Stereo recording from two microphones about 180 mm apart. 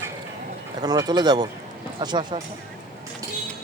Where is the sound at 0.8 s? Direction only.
20° right (ahead or behind).